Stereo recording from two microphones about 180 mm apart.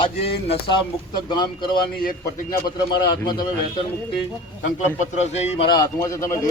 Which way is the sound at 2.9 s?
25° left (ahead or behind).